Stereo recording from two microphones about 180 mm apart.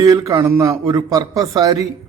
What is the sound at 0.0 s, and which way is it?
A man's voice, 20° right (ahead or behind).